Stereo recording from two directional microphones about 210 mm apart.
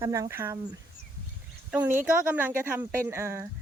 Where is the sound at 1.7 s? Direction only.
10° right (ahead or behind).